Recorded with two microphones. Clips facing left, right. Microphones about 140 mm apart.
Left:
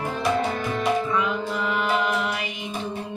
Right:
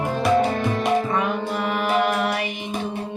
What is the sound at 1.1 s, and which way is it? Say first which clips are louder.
Music: right 2 dB; 50° right (ahead or behind).